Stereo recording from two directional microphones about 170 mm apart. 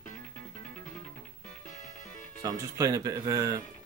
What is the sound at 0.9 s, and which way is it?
Music, 5° left (ahead or behind).